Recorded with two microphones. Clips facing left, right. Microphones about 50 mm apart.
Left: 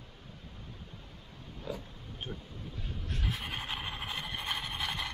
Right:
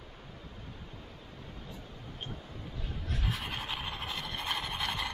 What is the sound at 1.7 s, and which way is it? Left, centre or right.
Speech, left.